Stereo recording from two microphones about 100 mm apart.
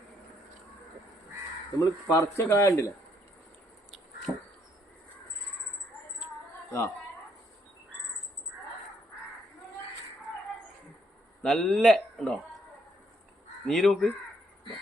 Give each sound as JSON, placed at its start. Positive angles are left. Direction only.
{"t": 1.8, "sound": "speech", "side_deg": 35}
{"t": 4.3, "sound": "crow", "side_deg": 0}
{"t": 11.4, "sound": "speech", "side_deg": 5}
{"t": 13.7, "sound": "speech", "side_deg": 0}